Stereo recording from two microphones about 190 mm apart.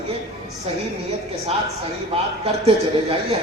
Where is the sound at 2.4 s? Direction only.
30° right (ahead or behind).